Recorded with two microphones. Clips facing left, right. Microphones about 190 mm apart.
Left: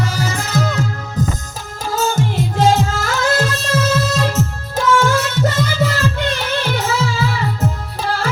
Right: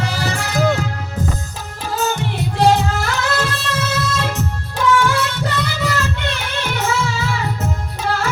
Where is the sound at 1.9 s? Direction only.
45° left (ahead or behind).